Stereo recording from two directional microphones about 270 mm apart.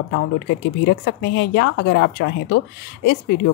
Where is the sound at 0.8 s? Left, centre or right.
Left.